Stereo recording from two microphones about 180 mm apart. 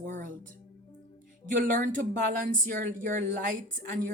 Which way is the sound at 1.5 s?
50° right (ahead or behind).